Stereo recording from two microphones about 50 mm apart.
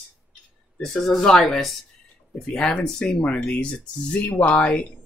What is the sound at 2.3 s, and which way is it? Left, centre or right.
Speech, centre.